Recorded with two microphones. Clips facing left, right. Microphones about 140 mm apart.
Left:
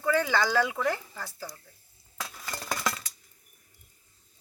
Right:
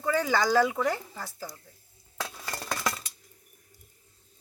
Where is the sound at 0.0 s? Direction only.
15° right (ahead or behind).